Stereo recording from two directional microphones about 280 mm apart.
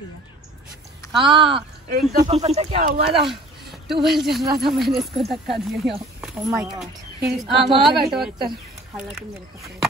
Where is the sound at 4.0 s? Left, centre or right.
Centre.